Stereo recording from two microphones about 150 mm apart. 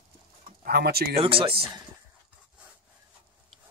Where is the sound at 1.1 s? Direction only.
35° right (ahead or behind).